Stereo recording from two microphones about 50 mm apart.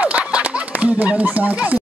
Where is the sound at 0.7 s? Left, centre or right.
Right.